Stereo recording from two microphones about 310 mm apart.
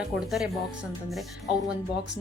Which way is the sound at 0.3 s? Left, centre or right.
Centre.